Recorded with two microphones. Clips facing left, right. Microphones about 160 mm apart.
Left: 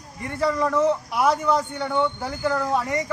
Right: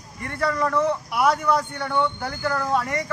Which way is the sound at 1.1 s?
20° left (ahead or behind).